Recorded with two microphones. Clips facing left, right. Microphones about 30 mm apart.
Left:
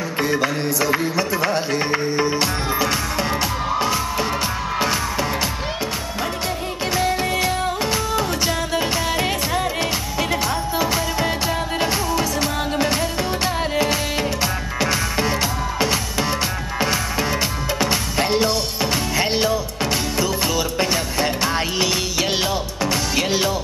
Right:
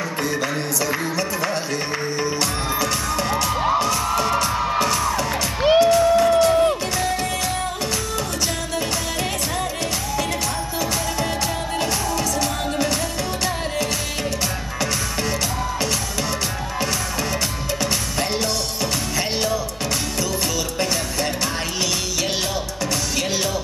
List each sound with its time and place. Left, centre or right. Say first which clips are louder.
0.2 s music: left 5 dB; centre
8.7 s music: left 4 dB; left
10.8 s music: left 2 dB; left
14.8 s music: left 4 dB; left
18.1 s music: left 4 dB; left
20.8 s music: left 1 dB; left
23.1 s music: left 4 dB; left